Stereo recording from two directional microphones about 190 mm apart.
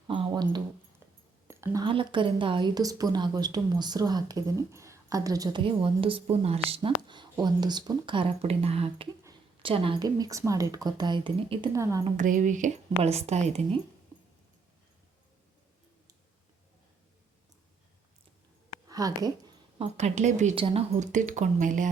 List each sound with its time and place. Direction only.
0.1 s a sound: 25° right (ahead or behind)
1.8 s a woman's voice: 25° right (ahead or behind)
11.7 s a woman's voice: 15° right (ahead or behind)
12.1 s speech: 45° right (ahead or behind)
18.9 s a sound: 20° right (ahead or behind)
20.0 s speech: 35° right (ahead or behind)